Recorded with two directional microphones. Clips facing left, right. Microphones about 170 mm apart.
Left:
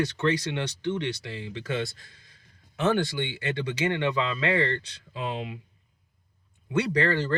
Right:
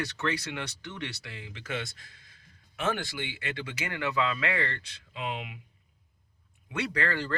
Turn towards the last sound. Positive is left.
turn(degrees=30)  # may be behind; listen again after turning